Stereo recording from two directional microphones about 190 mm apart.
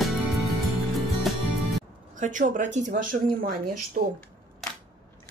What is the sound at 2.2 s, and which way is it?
A woman's voice, 45° right (ahead or behind).